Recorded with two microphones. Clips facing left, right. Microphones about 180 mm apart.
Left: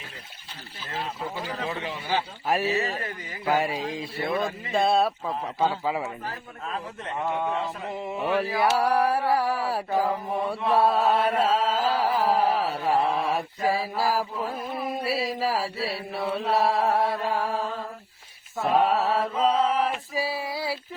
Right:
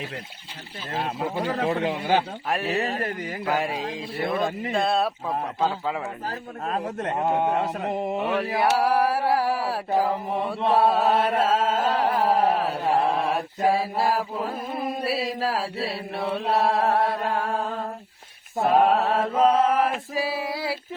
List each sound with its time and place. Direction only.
1.4 s speech: 65° right (ahead or behind)
2.5 s speech: centre (ahead or behind)
6.2 s a man's voice: 45° right (ahead or behind)
7.5 s mantra: 45° right (ahead or behind)
8.8 s speech: 5° right (ahead or behind)
10.7 s carnatic music: centre (ahead or behind)
14.0 s speech: centre (ahead or behind)
18.6 s speech: centre (ahead or behind)
19.3 s a man's voice: 50° right (ahead or behind)
19.8 s male singing: centre (ahead or behind)